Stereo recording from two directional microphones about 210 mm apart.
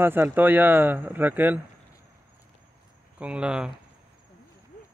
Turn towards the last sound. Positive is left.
turn(degrees=-5)  # may be behind; listen again after turning